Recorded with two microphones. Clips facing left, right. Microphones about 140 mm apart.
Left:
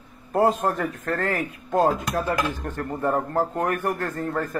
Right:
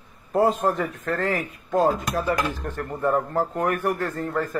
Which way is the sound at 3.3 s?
45° left (ahead or behind).